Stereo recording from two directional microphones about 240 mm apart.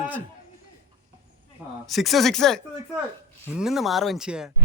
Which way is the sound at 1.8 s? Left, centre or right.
Centre.